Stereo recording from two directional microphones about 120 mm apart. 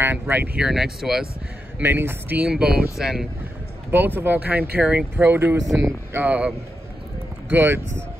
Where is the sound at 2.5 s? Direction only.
5° right (ahead or behind).